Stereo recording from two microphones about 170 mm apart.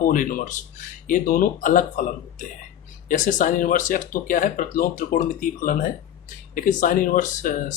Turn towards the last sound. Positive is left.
turn(degrees=50)  # may be behind; listen again after turning